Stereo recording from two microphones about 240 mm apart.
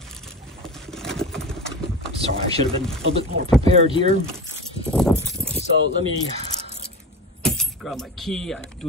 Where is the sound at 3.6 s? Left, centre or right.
Right.